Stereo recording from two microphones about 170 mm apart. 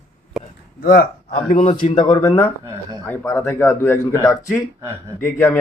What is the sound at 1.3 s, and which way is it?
Speech, 35° left (ahead or behind).